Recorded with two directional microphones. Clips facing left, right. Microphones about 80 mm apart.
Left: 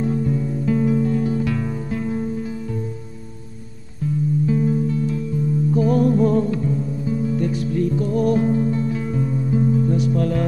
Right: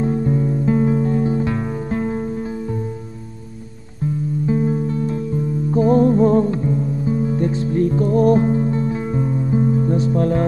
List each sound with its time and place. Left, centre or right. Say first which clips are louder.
0.0 s music: right 3 dB; right
4.5 s music: right 3 dB; right